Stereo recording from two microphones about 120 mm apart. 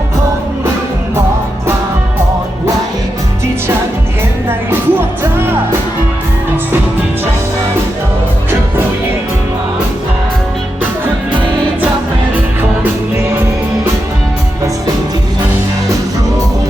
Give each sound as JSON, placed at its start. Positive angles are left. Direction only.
{"t": 4.4, "sound": "music", "side_deg": -20}